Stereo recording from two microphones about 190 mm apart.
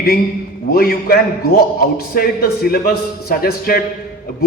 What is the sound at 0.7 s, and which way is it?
A man's voice, 55° left (ahead or behind).